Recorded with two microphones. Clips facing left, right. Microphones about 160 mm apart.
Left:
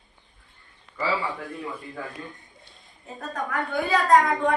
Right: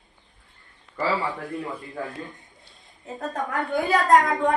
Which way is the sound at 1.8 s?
Centre (ahead or behind).